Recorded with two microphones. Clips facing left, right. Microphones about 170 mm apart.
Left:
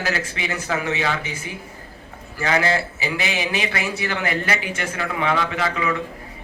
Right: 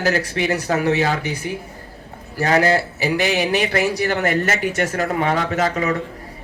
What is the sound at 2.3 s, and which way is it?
A man's voice, 40° right (ahead or behind).